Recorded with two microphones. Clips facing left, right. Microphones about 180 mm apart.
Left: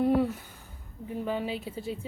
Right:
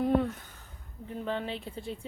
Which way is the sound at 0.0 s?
10° left (ahead or behind).